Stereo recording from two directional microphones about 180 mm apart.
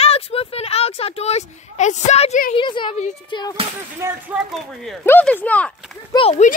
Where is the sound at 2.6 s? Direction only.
25° left (ahead or behind).